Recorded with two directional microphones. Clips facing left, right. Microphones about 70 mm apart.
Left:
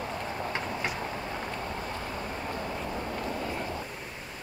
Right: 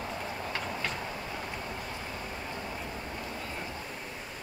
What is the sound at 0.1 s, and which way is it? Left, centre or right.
Vehicle, centre.